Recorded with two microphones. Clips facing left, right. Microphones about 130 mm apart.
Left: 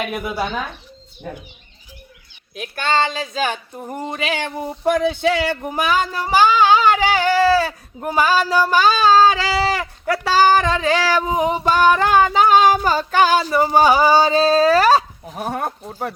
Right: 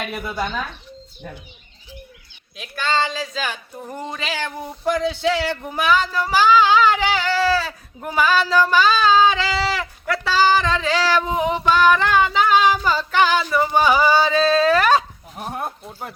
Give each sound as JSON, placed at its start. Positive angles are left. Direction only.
{"t": 0.1, "sound": "speech", "side_deg": 10}
{"t": 3.0, "sound": "speech", "side_deg": 20}
{"t": 3.3, "sound": "speech", "side_deg": 50}
{"t": 3.8, "sound": "speech", "side_deg": 25}
{"t": 4.9, "sound": "speech", "side_deg": 55}
{"t": 8.4, "sound": "speech", "side_deg": 15}
{"t": 8.7, "sound": "speech", "side_deg": 45}
{"t": 11.3, "sound": "female singing", "side_deg": 40}
{"t": 15.4, "sound": "speech", "side_deg": 65}